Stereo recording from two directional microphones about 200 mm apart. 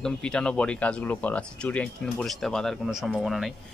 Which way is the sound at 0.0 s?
5° left (ahead or behind).